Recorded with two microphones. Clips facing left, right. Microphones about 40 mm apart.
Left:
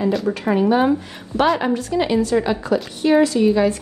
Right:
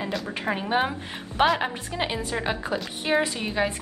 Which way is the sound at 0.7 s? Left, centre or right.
Centre.